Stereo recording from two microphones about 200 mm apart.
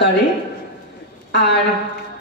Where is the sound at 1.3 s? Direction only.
60° left (ahead or behind).